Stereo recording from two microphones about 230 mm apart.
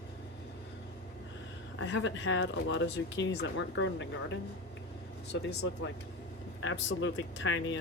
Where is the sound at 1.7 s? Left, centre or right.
Left.